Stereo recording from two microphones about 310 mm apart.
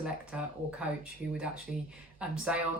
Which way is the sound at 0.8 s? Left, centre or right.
Centre.